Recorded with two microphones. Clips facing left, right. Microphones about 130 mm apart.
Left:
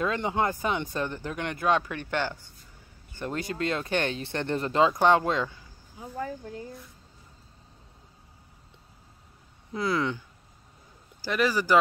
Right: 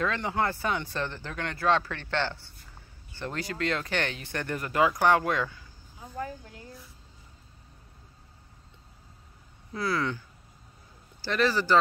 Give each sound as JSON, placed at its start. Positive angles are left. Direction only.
{"t": 0.0, "sound": "speech", "side_deg": 20}
{"t": 9.7, "sound": "speech", "side_deg": 20}
{"t": 11.2, "sound": "speech", "side_deg": 10}